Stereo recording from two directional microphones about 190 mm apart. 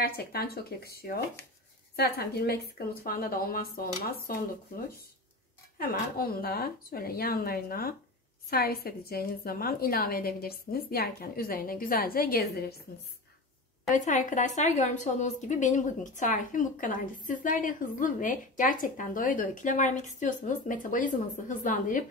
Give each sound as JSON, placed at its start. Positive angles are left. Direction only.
{"t": 0.0, "sound": "speech", "side_deg": 55}
{"t": 13.9, "sound": "speech", "side_deg": 40}